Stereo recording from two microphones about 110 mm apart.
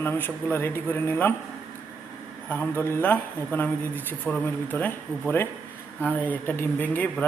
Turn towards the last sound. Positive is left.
turn(degrees=15)  # may be behind; listen again after turning